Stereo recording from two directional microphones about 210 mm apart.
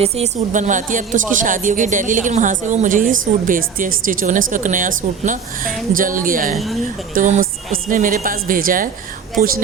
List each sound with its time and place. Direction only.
0.0 s a woman's voice: 30° right (ahead or behind)